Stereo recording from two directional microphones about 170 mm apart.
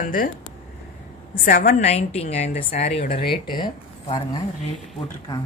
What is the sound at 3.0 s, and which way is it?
Speech, 65° left (ahead or behind).